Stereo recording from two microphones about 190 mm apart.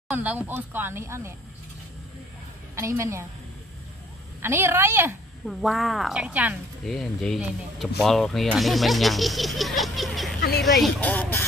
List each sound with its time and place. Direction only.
0.1 s speech: 10° right (ahead or behind)
2.7 s speech: 15° right (ahead or behind)
4.4 s speech: 10° right (ahead or behind)
5.5 s speech: centre (ahead or behind)